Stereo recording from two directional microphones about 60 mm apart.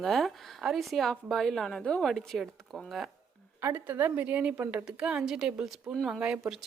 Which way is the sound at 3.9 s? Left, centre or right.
Right.